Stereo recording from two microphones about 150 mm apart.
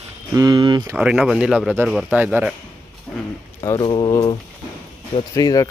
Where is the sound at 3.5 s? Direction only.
30° left (ahead or behind).